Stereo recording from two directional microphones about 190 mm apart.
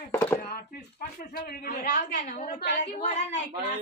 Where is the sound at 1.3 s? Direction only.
55° left (ahead or behind); by 3.4 s 35° left (ahead or behind).